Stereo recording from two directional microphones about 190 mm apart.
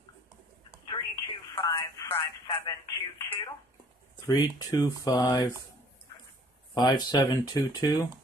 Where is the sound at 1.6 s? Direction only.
15° left (ahead or behind).